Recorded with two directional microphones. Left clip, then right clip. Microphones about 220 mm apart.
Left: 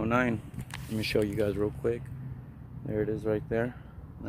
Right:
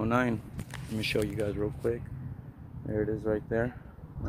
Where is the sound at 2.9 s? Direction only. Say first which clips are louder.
Even; 10° left (ahead or behind).